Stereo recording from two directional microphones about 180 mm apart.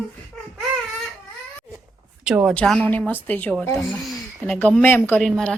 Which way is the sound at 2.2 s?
5° right (ahead or behind).